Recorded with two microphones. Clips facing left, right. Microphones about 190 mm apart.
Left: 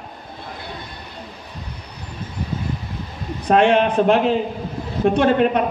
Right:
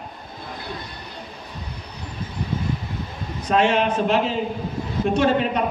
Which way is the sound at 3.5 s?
55° left (ahead or behind).